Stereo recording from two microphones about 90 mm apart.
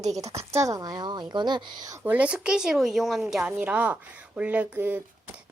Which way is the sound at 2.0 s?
15° right (ahead or behind).